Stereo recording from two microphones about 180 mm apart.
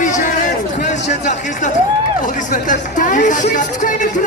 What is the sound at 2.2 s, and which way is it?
Speech, 45° left (ahead or behind).